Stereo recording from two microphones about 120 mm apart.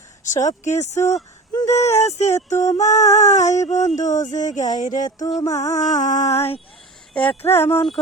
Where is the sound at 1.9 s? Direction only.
70° left (ahead or behind).